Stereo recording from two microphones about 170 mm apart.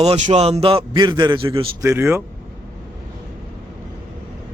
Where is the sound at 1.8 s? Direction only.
15° right (ahead or behind).